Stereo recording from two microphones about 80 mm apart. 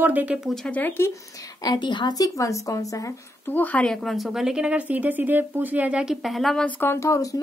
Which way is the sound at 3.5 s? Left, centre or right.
Left.